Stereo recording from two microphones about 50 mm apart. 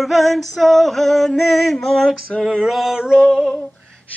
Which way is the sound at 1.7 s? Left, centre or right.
Centre.